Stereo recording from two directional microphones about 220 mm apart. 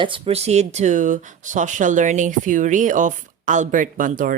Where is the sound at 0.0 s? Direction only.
25° right (ahead or behind).